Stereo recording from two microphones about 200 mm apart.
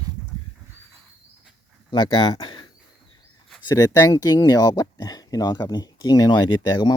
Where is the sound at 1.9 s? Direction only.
20° left (ahead or behind).